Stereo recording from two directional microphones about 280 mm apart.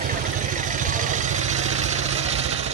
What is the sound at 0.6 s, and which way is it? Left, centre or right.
Vehicle, right.